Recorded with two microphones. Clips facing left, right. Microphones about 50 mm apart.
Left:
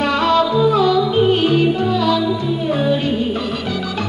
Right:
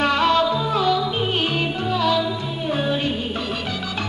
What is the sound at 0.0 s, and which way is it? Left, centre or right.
Music, right.